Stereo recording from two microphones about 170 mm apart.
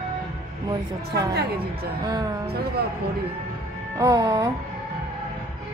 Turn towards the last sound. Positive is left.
turn(degrees=-20)  # may be behind; listen again after turning